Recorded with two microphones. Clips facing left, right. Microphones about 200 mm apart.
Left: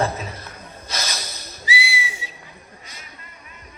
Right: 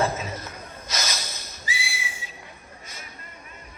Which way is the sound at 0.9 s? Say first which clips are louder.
Left 1 dB; 35° left (ahead or behind).